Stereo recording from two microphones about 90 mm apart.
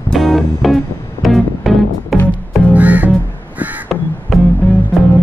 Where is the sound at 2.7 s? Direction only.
15° right (ahead or behind).